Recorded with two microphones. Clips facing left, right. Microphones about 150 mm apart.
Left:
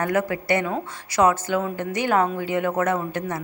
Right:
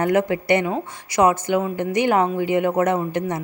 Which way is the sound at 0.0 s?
20° right (ahead or behind).